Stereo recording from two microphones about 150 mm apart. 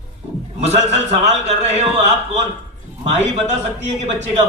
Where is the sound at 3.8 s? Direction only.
50° right (ahead or behind).